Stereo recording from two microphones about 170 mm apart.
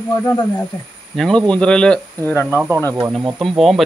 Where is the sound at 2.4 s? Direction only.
10° right (ahead or behind).